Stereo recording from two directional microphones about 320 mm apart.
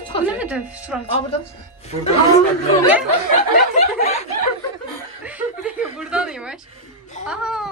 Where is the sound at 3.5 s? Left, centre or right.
Left.